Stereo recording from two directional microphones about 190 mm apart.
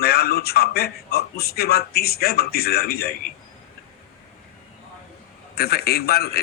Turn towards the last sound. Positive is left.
turn(degrees=55)  # may be behind; listen again after turning